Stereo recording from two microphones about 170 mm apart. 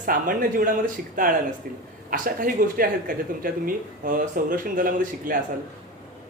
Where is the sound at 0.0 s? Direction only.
55° right (ahead or behind).